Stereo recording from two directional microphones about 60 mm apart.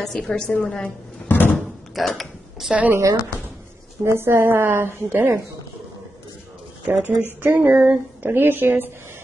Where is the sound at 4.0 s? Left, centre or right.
Right.